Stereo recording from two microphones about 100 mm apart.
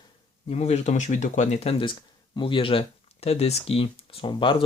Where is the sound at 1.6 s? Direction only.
70° left (ahead or behind).